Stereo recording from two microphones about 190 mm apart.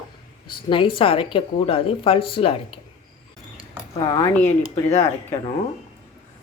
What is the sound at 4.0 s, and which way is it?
Speech, 20° left (ahead or behind).